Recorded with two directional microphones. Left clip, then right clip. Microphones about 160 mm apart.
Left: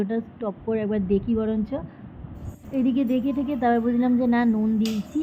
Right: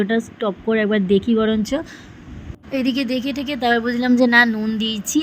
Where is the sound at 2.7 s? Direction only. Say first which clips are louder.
Right 3 dB; 30° right (ahead or behind).